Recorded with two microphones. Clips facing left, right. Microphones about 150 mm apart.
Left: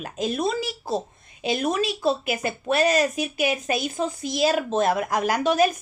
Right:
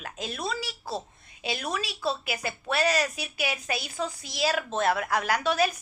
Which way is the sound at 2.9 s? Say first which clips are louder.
Left 6 dB; 45° left (ahead or behind).